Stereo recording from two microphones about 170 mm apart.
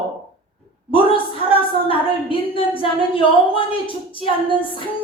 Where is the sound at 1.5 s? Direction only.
30° left (ahead or behind).